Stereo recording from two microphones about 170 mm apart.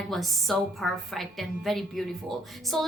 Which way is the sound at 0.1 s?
Centre (ahead or behind).